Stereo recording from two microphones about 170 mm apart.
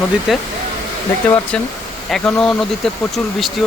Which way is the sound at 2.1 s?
5° left (ahead or behind).